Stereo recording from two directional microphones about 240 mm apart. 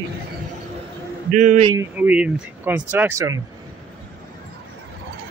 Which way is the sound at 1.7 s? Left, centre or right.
Centre.